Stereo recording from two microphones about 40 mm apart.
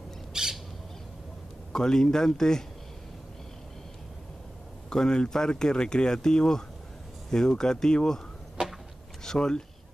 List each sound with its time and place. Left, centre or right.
0.3 s bird: centre
1.7 s speech: centre
4.8 s speech: centre
9.2 s a sound: centre